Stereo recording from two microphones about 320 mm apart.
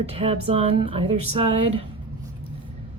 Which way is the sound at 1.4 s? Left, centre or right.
Right.